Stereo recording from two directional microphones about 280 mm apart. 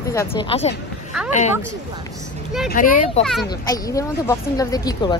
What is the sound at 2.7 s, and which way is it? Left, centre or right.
Speech, left.